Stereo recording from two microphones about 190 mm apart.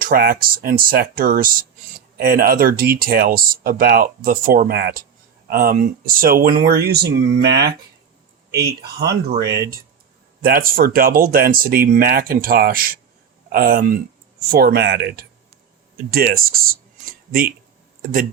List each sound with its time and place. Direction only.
0.0 s speech: 50° right (ahead or behind)
9.4 s speech: 15° right (ahead or behind)
10.4 s speech: 50° right (ahead or behind)